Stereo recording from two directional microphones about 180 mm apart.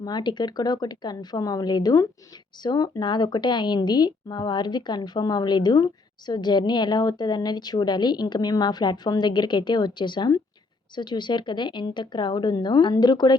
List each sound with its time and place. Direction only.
0.0 s speech: 25° left (ahead or behind)